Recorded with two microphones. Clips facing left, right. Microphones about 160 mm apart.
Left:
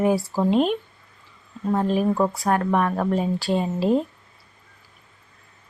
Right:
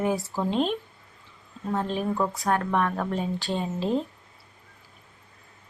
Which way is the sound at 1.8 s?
10° left (ahead or behind).